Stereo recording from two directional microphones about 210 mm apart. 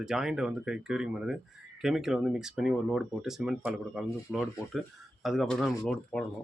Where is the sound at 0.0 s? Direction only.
Centre (ahead or behind).